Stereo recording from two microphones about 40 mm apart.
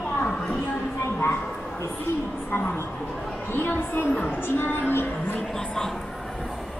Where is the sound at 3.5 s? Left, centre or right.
Left.